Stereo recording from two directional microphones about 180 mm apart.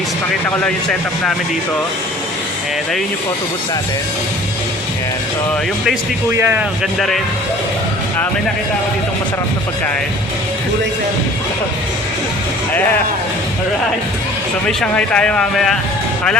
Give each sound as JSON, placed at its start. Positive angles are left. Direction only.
{"t": 6.3, "sound": "speech", "side_deg": -10}
{"t": 14.7, "sound": "speech", "side_deg": 5}